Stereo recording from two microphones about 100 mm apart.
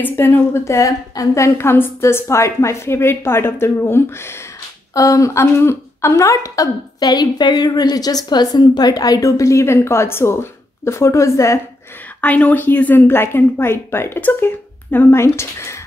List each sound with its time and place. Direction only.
0.0 s a woman's voice: 20° left (ahead or behind)
12.2 s a woman's voice: 15° left (ahead or behind)